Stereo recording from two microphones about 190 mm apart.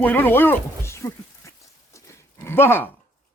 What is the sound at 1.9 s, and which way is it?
Dog, 15° left (ahead or behind).